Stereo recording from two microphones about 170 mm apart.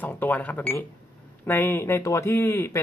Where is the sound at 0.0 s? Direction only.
10° left (ahead or behind).